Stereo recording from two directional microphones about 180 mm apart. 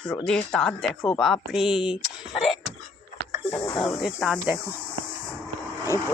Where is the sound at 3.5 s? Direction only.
10° left (ahead or behind).